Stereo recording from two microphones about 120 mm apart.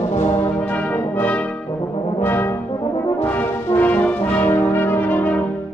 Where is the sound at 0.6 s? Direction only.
10° left (ahead or behind).